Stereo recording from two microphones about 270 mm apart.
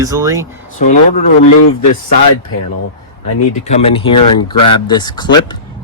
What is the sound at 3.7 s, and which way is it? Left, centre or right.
Speech, left.